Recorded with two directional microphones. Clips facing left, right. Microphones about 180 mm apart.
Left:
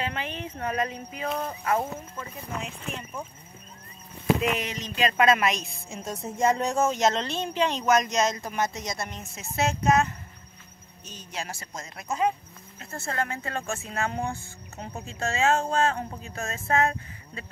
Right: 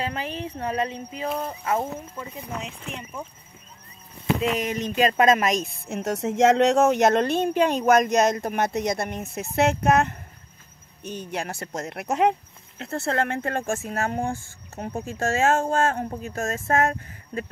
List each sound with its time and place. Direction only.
0.0 s speech: 35° right (ahead or behind)
1.3 s speech: 10° right (ahead or behind)
4.6 s speech: 50° right (ahead or behind)
5.9 s speech: 70° right (ahead or behind); by 17.5 s 45° right (ahead or behind)